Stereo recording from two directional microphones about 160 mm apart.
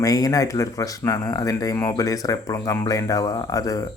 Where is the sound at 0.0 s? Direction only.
20° left (ahead or behind).